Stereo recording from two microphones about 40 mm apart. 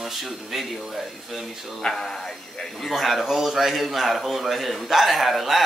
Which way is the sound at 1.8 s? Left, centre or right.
Centre.